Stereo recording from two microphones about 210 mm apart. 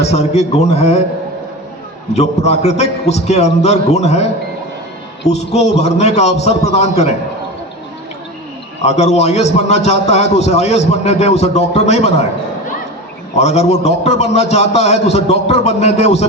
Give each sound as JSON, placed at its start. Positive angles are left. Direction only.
{"t": 0.0, "sound": "a man's voice", "side_deg": 30}
{"t": 2.1, "sound": "a man's voice", "side_deg": 30}
{"t": 5.3, "sound": "a man's voice", "side_deg": 30}
{"t": 8.8, "sound": "a man's voice", "side_deg": 30}
{"t": 13.3, "sound": "a man's voice", "side_deg": 30}